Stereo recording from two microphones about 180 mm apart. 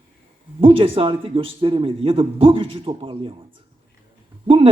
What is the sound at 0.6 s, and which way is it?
A man's voice, 30° right (ahead or behind).